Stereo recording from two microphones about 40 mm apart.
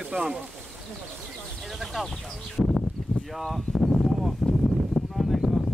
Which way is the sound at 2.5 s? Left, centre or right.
Centre.